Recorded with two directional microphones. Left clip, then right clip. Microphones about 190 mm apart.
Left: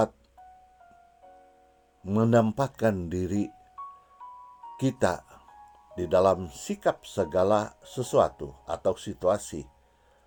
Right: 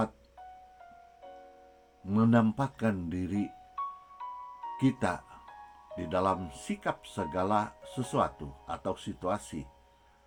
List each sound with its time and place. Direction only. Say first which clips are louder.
2.0 s speech: left 4 dB; 50° left (ahead or behind)
3.8 s music: right 6 dB; 20° right (ahead or behind)
4.8 s speech: left 5 dB; 55° left (ahead or behind)